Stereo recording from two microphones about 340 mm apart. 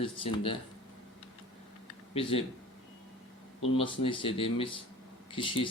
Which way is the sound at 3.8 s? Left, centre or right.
Centre.